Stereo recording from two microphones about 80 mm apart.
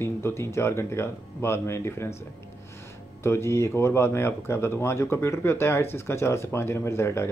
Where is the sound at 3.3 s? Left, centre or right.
Left.